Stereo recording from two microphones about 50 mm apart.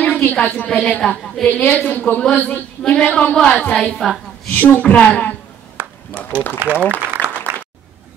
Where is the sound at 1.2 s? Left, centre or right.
Centre.